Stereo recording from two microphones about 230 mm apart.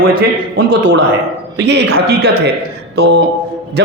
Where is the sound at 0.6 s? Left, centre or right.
Right.